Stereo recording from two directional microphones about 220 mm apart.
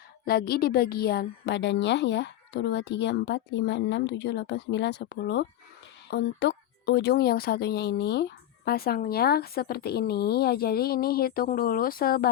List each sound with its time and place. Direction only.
0.3 s speech: 45° left (ahead or behind)